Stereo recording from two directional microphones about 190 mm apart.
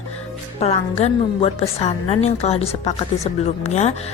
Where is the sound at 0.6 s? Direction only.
35° left (ahead or behind).